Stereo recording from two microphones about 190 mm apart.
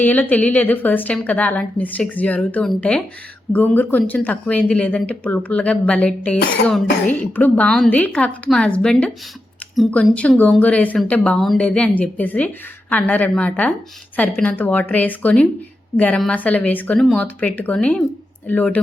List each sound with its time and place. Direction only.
0.0 s speech: 10° left (ahead or behind)